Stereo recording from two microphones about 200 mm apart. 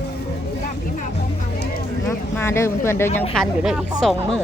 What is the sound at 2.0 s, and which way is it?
Speech, 15° left (ahead or behind).